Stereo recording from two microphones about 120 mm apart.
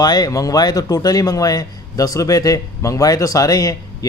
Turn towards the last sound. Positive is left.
turn(degrees=30)  # may be behind; listen again after turning